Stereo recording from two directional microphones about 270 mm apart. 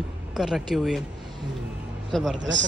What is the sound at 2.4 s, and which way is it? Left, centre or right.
Speech, right.